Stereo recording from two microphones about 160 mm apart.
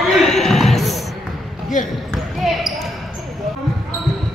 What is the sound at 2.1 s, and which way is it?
Basketball bounce, centre (ahead or behind).